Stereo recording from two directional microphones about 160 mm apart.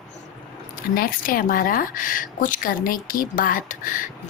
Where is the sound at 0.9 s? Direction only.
60° left (ahead or behind).